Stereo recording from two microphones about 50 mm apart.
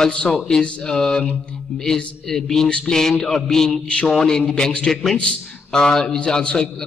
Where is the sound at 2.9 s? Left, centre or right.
Centre.